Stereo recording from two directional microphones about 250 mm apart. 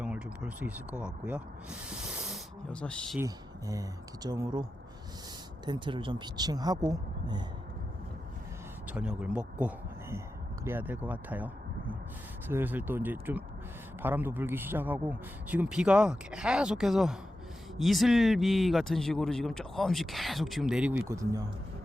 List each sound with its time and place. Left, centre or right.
0.0 s speech: centre
3.2 s speech: centre
5.6 s speech: centre
8.9 s speech: centre